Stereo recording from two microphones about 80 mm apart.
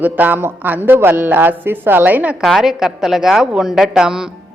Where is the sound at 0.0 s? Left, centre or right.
Right.